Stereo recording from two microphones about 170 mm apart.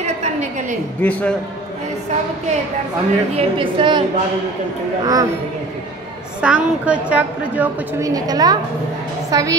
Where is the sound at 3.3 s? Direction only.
30° right (ahead or behind).